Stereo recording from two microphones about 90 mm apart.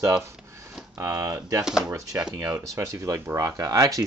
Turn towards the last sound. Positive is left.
turn(degrees=-45)  # may be behind; listen again after turning